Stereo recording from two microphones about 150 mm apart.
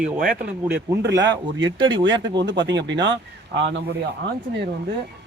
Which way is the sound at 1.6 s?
30° right (ahead or behind).